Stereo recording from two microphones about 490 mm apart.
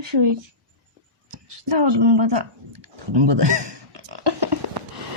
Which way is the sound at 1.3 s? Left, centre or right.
Right.